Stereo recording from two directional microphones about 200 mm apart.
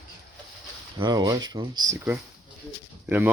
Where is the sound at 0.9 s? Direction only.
20° right (ahead or behind).